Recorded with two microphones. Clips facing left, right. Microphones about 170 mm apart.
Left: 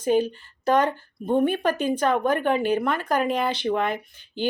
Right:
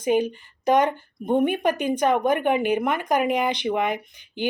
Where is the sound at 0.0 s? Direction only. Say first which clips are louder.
Even; 15° right (ahead or behind).